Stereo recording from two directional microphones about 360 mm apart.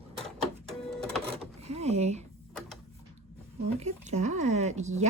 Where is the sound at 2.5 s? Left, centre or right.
Centre.